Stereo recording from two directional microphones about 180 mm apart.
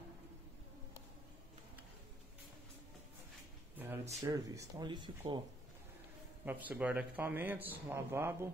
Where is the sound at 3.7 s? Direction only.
10° right (ahead or behind).